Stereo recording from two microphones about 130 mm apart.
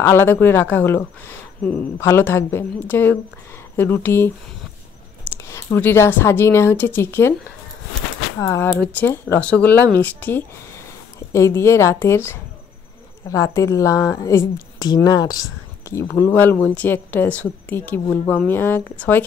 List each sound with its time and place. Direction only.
0.0 s speech: 20° left (ahead or behind)
5.3 s speech: 20° left (ahead or behind)
8.4 s speech: 20° left (ahead or behind)
15.8 s speech: 20° left (ahead or behind)